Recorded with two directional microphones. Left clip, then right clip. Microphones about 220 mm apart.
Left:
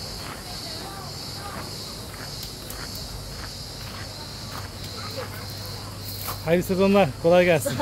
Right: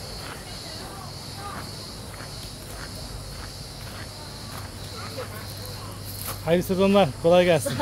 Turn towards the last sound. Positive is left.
turn(degrees=-5)  # may be behind; listen again after turning